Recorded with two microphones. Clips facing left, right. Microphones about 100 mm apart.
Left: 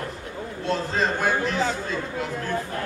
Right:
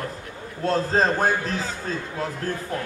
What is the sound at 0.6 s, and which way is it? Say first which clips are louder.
Speech: right 4 dB; 40° right (ahead or behind).